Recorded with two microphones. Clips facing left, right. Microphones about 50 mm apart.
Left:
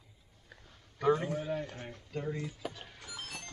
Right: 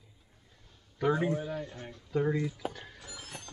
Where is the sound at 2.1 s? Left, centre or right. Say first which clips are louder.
Right 8 dB; right.